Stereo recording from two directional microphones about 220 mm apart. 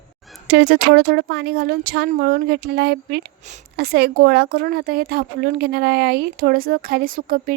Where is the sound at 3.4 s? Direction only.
30° right (ahead or behind).